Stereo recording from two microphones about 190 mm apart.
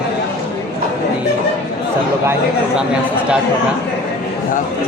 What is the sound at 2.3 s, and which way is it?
Speech, 5° right (ahead or behind).